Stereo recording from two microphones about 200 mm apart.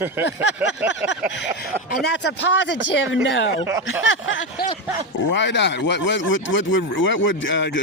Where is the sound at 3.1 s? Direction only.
70° left (ahead or behind).